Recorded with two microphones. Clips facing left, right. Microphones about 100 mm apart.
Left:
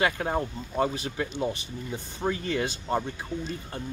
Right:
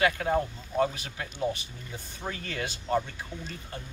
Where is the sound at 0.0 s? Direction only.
30° left (ahead or behind).